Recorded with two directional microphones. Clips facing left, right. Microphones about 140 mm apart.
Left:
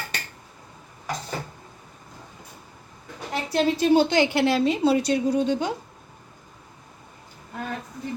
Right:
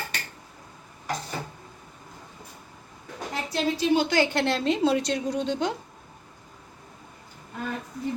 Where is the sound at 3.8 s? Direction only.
45° left (ahead or behind).